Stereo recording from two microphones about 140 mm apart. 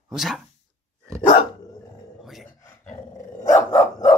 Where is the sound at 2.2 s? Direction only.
Centre (ahead or behind).